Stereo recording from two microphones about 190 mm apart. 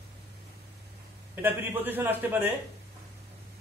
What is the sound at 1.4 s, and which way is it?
A man's voice, 10° right (ahead or behind).